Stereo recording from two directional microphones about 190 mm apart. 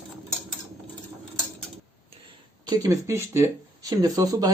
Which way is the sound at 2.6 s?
20° right (ahead or behind).